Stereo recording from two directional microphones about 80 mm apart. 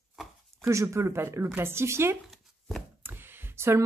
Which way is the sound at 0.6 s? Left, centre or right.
Right.